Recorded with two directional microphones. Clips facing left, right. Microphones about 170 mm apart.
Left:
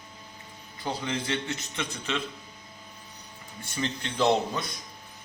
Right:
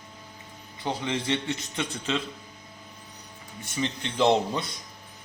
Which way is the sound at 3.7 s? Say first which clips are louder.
Right 2 dB; 20° right (ahead or behind).